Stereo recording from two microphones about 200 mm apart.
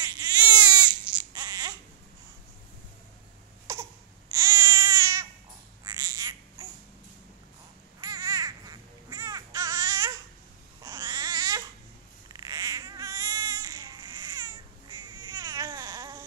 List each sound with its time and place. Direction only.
0.0 s baby cry: 20° right (ahead or behind)
3.7 s crying: 15° right (ahead or behind)
4.3 s baby cry: 15° right (ahead or behind)
5.9 s babbling: 15° right (ahead or behind)
8.0 s babbling: 15° right (ahead or behind)
10.8 s crying: 20° right (ahead or behind)
12.3 s baby cry: 20° right (ahead or behind)